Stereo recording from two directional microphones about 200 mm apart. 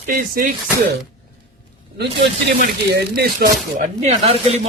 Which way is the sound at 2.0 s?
55° right (ahead or behind).